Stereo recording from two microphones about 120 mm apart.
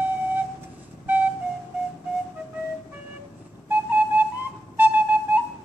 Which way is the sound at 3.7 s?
15° right (ahead or behind).